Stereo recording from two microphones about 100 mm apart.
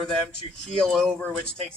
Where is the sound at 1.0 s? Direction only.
10° left (ahead or behind).